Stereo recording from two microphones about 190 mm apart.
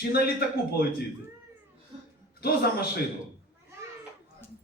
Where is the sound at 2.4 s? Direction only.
55° left (ahead or behind).